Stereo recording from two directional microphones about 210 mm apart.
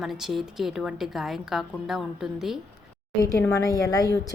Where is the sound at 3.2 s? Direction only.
15° left (ahead or behind).